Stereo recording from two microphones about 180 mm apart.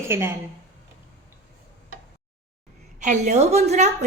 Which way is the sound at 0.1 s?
15° right (ahead or behind).